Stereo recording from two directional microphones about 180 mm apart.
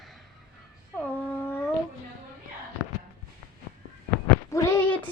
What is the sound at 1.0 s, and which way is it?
Speech, 10° left (ahead or behind).